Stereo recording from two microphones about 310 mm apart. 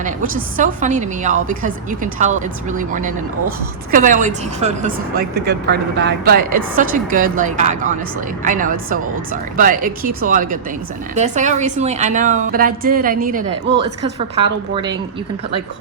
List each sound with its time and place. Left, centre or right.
0.0 s a woman's voice: right